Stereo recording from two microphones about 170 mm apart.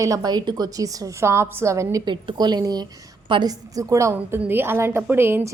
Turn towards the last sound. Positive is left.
turn(degrees=-15)  # may be behind; listen again after turning